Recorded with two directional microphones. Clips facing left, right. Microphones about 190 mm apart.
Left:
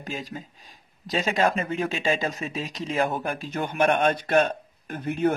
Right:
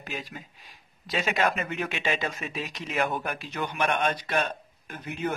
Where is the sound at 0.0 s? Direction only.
40° left (ahead or behind).